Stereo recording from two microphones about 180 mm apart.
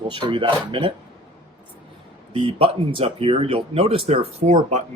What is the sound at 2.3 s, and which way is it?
Speech, 30° right (ahead or behind).